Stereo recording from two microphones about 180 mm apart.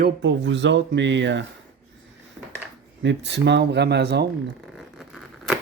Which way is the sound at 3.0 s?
80° right.